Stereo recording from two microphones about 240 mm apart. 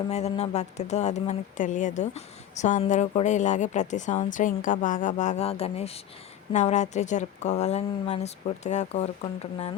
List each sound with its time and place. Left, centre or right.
0.1 s a woman's voice: left